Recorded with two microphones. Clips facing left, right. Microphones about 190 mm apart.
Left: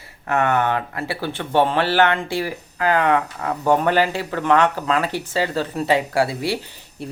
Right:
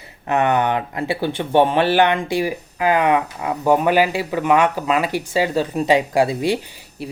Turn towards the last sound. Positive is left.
turn(degrees=-10)  # may be behind; listen again after turning